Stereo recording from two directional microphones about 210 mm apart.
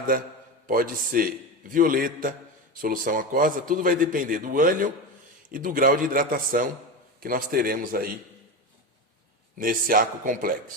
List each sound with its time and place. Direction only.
0.7 s a man's voice: 40° right (ahead or behind)
9.6 s a man's voice: 40° right (ahead or behind)